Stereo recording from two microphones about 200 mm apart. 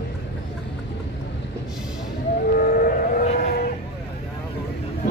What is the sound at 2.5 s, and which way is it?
Vehicle, 45° left (ahead or behind).